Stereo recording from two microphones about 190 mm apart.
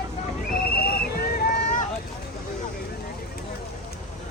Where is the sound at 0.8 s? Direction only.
55° left (ahead or behind).